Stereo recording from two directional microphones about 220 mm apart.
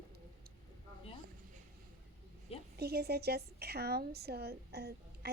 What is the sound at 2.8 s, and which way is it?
A woman's voice, 45° right (ahead or behind).